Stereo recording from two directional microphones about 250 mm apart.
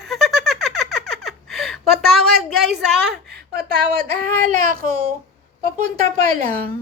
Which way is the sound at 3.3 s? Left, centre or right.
Right.